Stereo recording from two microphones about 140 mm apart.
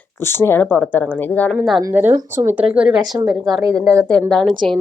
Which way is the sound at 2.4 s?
10° right (ahead or behind).